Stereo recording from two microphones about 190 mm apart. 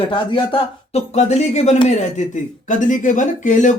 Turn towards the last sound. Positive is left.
turn(degrees=40)  # may be behind; listen again after turning